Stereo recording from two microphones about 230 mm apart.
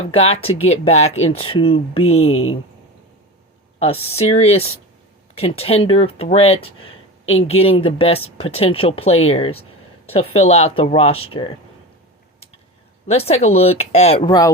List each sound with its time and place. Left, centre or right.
0.1 s speech: left
2.3 s speech: left
3.8 s speech: left
13.1 s speech: left
14.3 s speech: centre